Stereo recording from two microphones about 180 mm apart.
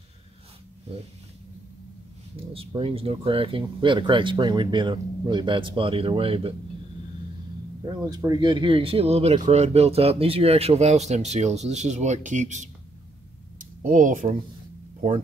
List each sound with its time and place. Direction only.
2.3 s speech: 30° right (ahead or behind)
7.8 s speech: 20° right (ahead or behind); by 12.6 s 40° right (ahead or behind)
13.6 s a sound: 45° right (ahead or behind)